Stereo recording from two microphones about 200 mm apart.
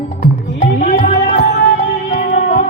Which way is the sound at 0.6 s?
30° left (ahead or behind).